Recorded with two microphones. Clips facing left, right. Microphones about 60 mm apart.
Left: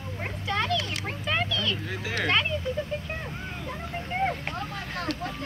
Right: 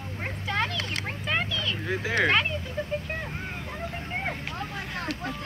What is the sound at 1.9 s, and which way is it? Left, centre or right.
Speech, right.